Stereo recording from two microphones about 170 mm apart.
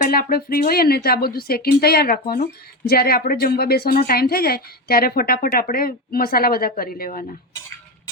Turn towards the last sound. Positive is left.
turn(degrees=55)  # may be behind; listen again after turning